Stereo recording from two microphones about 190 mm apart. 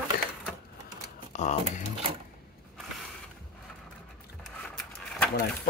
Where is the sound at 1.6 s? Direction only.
30° right (ahead or behind).